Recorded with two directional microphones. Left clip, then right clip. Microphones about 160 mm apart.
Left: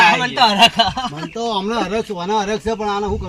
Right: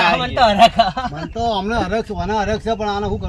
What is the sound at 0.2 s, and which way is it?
Speech, 45° right (ahead or behind).